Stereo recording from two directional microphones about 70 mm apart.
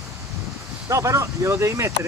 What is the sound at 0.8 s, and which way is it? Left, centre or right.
Speech, right.